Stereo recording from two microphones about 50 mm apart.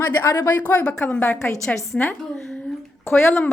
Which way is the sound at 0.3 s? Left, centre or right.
Left.